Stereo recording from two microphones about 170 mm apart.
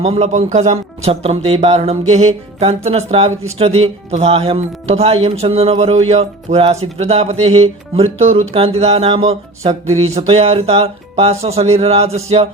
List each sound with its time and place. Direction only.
0.0 s speech: 40° right (ahead or behind)